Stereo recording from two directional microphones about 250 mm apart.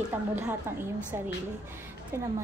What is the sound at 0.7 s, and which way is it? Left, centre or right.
A woman's voice, centre.